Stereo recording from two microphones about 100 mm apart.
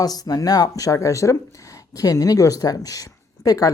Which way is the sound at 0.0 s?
40° left (ahead or behind).